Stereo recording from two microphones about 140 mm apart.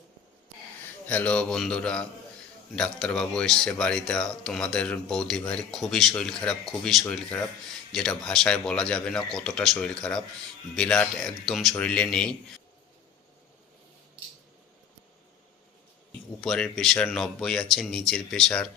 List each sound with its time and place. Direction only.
1.0 s speech: 10° left (ahead or behind)
16.4 s speech: centre (ahead or behind)